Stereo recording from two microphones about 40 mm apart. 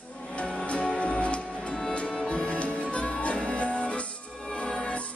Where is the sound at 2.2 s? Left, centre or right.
Left.